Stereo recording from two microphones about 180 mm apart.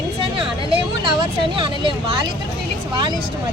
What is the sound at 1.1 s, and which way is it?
Speech, 30° right (ahead or behind).